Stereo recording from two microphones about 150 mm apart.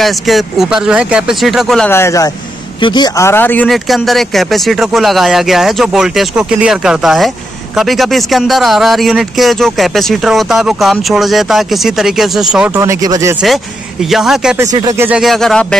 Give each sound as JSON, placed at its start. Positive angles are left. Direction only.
{"t": 0.0, "sound": "speech", "side_deg": 0}
{"t": 1.9, "sound": "speech", "side_deg": 15}
{"t": 2.8, "sound": "speech", "side_deg": 30}
{"t": 3.3, "sound": "speech", "side_deg": 15}
{"t": 3.6, "sound": "speech", "side_deg": 0}
{"t": 12.7, "sound": "speech", "side_deg": -20}
{"t": 14.1, "sound": "speech", "side_deg": 0}
{"t": 14.6, "sound": "speech", "side_deg": -20}
{"t": 15.0, "sound": "speech", "side_deg": -5}